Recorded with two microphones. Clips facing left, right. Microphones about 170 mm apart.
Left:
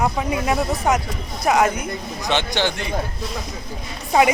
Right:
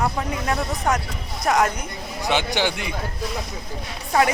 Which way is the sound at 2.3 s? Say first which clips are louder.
Left 1 dB; 10° right (ahead or behind).